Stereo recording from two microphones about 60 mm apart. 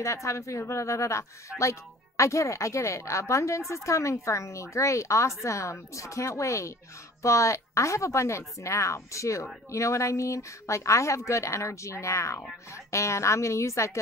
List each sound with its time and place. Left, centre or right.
0.0 s speech: left